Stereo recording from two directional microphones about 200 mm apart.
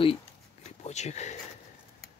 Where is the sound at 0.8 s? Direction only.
35° left (ahead or behind).